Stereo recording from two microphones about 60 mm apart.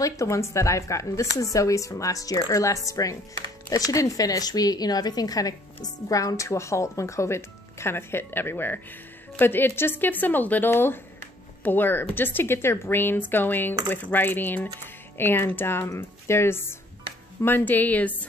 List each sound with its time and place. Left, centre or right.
0.0 s a woman's voice: left
6.0 s a woman's voice: left